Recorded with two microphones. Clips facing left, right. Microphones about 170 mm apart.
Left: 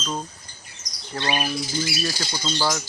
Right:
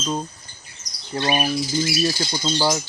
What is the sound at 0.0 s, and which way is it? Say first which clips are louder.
Speech: right 4 dB; 15° right (ahead or behind).